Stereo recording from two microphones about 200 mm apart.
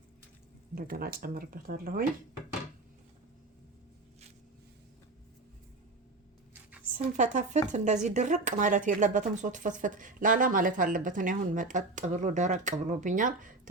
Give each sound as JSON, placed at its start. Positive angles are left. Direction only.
{"t": 0.8, "sound": "speech", "side_deg": -45}
{"t": 6.9, "sound": "speech", "side_deg": -40}